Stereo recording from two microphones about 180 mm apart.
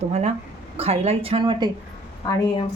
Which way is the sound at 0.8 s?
35° right (ahead or behind).